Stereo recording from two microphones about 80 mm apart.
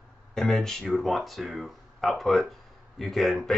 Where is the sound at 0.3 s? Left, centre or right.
Centre.